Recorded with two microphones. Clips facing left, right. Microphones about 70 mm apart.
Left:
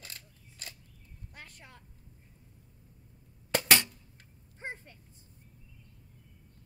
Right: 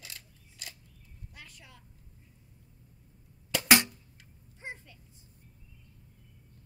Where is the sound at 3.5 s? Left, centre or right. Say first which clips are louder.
Right 2 dB; left.